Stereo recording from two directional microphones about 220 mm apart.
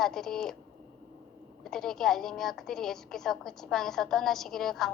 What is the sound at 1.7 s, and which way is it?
A woman's voice, centre (ahead or behind).